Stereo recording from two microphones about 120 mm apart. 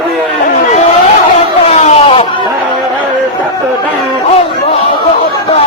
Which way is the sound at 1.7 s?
65° left (ahead or behind).